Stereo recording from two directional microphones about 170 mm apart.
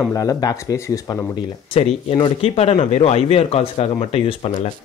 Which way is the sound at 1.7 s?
35° left (ahead or behind).